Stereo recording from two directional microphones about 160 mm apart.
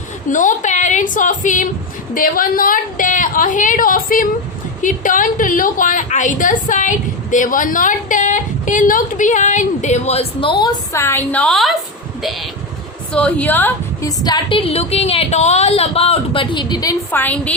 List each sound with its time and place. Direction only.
0.3 s a woman's voice: 55° left (ahead or behind)
10.6 s a woman's voice: 15° left (ahead or behind); by 11.8 s centre (ahead or behind)
13.1 s a woman's voice: 10° left (ahead or behind)
14.3 s speech: 30° left (ahead or behind)
17.1 s a woman's voice: 10° left (ahead or behind)